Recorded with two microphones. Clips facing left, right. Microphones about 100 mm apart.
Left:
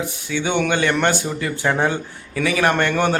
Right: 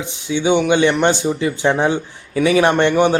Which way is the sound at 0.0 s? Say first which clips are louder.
Right 4 dB; 20° right (ahead or behind).